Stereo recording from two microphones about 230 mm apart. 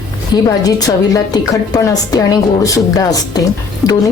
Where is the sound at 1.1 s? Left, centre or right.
Centre.